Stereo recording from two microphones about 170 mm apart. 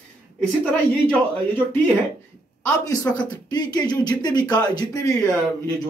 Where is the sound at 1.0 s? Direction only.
10° left (ahead or behind).